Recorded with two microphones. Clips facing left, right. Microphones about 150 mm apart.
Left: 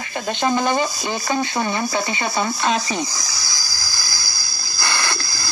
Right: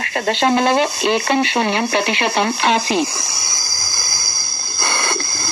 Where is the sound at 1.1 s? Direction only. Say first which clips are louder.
Right 4 dB; 65° right (ahead or behind).